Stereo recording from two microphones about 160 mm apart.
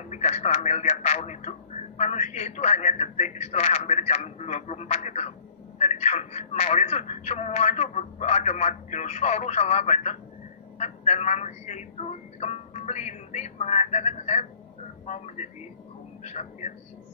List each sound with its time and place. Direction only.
0.1 s a man's voice: 45° left (ahead or behind)